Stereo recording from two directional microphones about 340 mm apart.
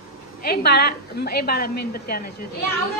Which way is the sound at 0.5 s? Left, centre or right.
Left.